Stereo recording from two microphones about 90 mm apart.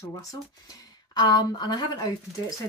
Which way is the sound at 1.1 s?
50° left (ahead or behind).